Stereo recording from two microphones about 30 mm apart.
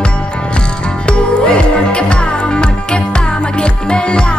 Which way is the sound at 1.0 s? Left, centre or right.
Left.